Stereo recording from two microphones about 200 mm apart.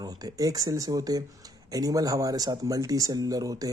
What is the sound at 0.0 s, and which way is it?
Speech, 20° right (ahead or behind).